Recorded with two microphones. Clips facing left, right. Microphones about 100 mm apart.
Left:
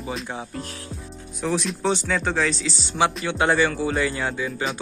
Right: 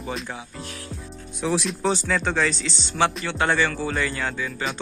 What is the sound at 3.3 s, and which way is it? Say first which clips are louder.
Speech: left 2 dB; 15° left (ahead or behind).